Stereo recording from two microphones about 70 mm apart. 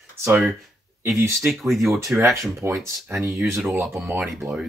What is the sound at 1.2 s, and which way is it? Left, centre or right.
Speech, right.